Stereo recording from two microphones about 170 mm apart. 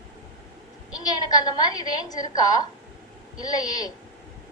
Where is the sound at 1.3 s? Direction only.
25° left (ahead or behind).